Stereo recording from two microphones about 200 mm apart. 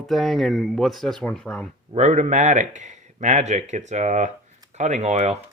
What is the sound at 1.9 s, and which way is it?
Speech, 35° right (ahead or behind).